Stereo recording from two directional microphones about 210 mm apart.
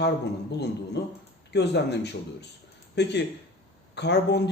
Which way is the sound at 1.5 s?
55° left (ahead or behind).